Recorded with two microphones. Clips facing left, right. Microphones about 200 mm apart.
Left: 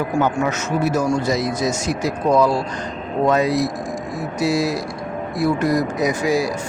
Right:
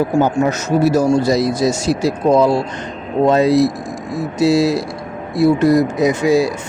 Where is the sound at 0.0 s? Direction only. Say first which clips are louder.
Right 5 dB; 35° right (ahead or behind).